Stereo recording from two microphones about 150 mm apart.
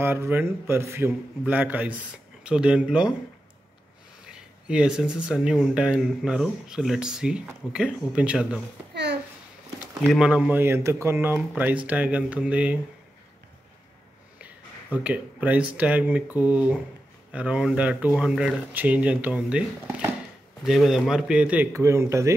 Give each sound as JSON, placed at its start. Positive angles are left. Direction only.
{"t": 0.0, "sound": "a man's voice", "side_deg": -15}
{"t": 4.6, "sound": "speech", "side_deg": -5}
{"t": 10.0, "sound": "a man's voice", "side_deg": -5}
{"t": 14.4, "sound": "a sound", "side_deg": -10}
{"t": 15.7, "sound": "a man's voice", "side_deg": -10}
{"t": 21.7, "sound": "speech", "side_deg": -20}